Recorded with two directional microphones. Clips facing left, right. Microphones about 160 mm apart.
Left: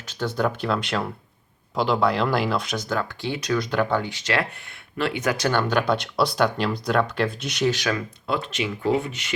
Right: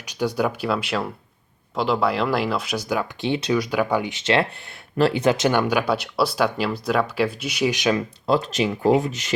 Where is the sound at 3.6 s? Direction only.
10° right (ahead or behind).